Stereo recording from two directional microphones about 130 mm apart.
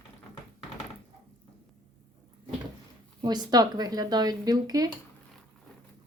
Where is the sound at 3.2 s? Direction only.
30° right (ahead or behind).